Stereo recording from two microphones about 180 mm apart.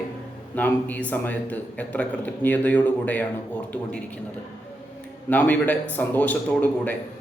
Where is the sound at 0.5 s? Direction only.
10° left (ahead or behind).